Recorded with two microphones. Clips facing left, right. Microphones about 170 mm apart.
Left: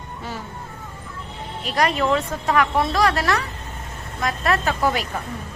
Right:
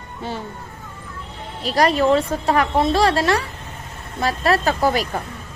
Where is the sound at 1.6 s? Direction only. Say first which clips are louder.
Right 4 dB; 35° right (ahead or behind).